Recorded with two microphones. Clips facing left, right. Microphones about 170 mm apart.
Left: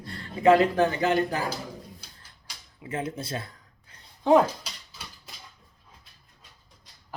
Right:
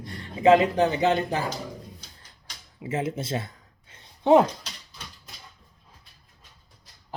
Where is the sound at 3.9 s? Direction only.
25° right (ahead or behind).